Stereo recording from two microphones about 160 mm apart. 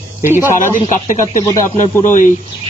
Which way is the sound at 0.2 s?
15° right (ahead or behind).